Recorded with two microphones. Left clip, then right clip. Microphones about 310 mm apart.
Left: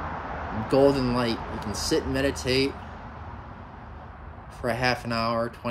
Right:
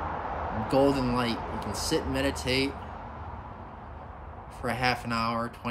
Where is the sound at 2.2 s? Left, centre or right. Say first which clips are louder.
Left 3 dB; centre.